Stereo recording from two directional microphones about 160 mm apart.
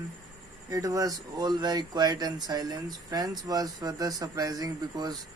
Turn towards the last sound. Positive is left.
turn(degrees=-25)  # may be behind; listen again after turning